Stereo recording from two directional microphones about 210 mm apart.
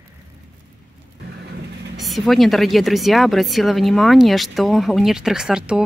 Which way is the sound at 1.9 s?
Centre (ahead or behind).